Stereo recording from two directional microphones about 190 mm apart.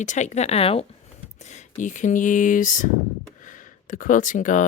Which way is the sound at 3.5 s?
45° left (ahead or behind).